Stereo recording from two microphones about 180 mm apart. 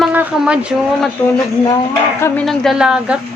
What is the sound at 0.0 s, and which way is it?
Speech, 10° right (ahead or behind).